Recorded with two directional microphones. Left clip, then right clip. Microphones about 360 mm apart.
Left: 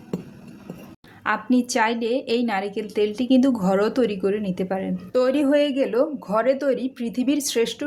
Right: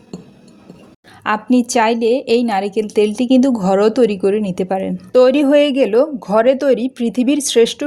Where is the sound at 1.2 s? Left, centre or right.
Left.